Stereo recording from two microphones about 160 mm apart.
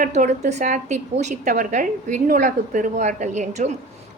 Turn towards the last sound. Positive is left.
turn(degrees=-45)  # may be behind; listen again after turning